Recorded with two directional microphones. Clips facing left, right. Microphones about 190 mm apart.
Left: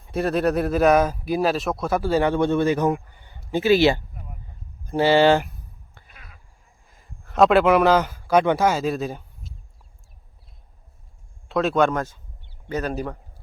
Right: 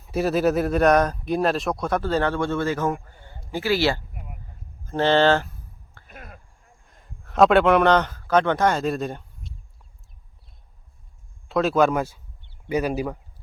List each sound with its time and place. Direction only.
0.0 s speech: centre (ahead or behind); by 4.0 s 20° left (ahead or behind)
4.1 s a sound: 10° right (ahead or behind)
4.9 s speech: 10° left (ahead or behind)
6.1 s a sound: 50° right (ahead or behind)
6.8 s a man's voice: 5° left (ahead or behind)
11.4 s a man's voice: centre (ahead or behind)